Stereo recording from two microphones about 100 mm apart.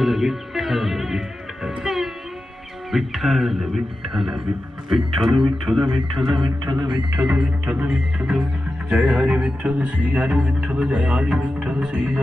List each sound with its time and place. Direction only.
0.0 s music: centre (ahead or behind)
2.9 s speech: centre (ahead or behind)
6.4 s speech: 45° right (ahead or behind)
7.2 s speech: 10° right (ahead or behind)